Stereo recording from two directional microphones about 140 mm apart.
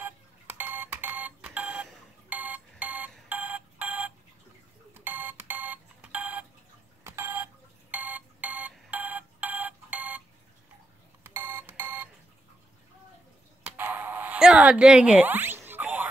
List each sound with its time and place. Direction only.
0.0 s alarm clock: 15° right (ahead or behind)
2.2 s telephone: 10° right (ahead or behind)
4.9 s a sound: 15° right (ahead or behind)
7.1 s telephone dialing: 15° right (ahead or behind)
7.9 s telephone: 10° right (ahead or behind)
11.2 s telephone: 15° right (ahead or behind)
13.7 s a sound: 15° right (ahead or behind)